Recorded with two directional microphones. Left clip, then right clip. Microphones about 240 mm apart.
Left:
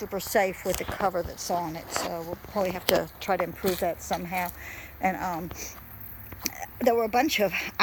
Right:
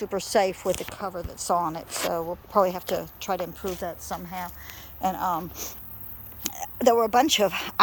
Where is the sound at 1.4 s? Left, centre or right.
Centre.